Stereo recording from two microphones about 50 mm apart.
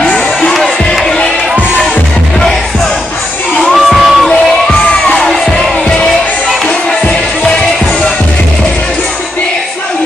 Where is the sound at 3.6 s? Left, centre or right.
Centre.